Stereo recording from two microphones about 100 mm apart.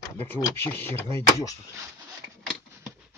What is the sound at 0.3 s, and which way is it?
Speech, 20° left (ahead or behind).